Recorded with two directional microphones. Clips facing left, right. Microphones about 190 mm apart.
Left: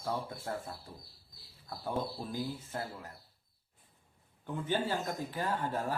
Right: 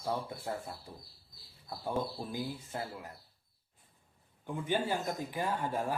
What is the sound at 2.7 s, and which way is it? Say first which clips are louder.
Speech: even; 15° right (ahead or behind).